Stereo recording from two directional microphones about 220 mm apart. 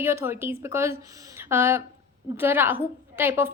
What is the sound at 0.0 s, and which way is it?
A woman's voice, 10° right (ahead or behind).